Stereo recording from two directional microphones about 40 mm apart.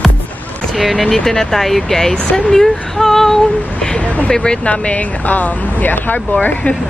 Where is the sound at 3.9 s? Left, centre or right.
Left.